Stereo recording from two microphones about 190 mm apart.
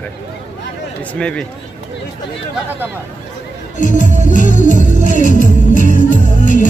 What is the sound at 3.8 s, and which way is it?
Music, 40° left (ahead or behind).